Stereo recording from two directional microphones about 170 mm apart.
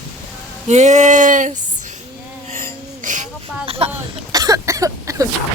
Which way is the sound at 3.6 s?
35° right (ahead or behind).